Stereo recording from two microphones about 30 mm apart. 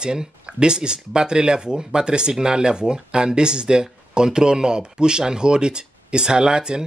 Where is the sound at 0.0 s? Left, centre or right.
Right.